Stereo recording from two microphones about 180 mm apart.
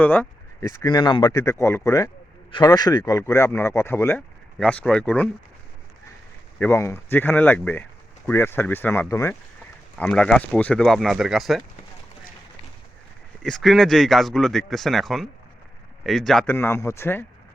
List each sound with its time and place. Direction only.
0.0 s speech: 10° left (ahead or behind)
0.8 s speech: 25° left (ahead or behind)
1.4 s speech: 15° left (ahead or behind)
6.6 s speech: 15° left (ahead or behind)
10.0 s speech: 5° left (ahead or behind)
13.4 s speech: centre (ahead or behind)